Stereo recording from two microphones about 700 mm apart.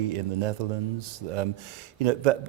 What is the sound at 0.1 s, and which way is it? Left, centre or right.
A man's voice, right.